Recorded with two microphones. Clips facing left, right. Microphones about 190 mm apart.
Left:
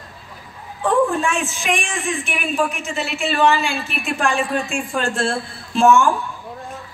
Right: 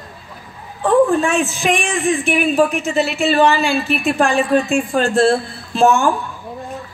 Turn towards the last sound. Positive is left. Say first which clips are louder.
# even
turn(degrees=-35)  # may be behind; listen again after turning